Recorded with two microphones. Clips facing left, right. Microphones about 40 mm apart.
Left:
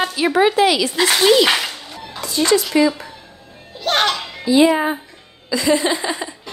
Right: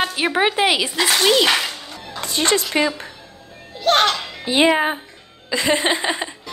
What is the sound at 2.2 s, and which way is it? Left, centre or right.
Speech, right.